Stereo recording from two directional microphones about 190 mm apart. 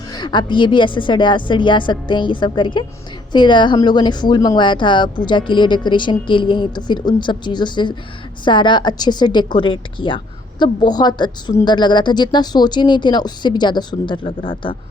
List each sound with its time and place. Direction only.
0.1 s a woman's voice: 25° left (ahead or behind)